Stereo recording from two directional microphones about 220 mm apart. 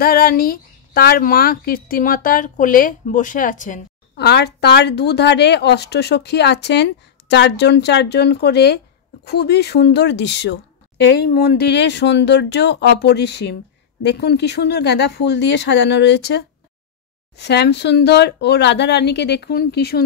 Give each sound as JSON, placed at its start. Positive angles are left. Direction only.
{"t": 0.0, "sound": "speech", "side_deg": 40}